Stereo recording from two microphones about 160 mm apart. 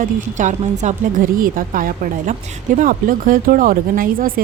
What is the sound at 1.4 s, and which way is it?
Speech, 65° right (ahead or behind).